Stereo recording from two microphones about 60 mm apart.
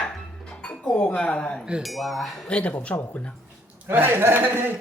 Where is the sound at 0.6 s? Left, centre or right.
Centre.